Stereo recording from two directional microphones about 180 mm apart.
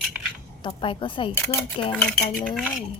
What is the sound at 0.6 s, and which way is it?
A woman's voice, 30° left (ahead or behind).